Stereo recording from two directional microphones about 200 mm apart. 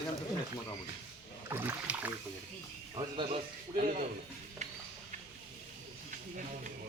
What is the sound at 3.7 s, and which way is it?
Speech, 40° right (ahead or behind).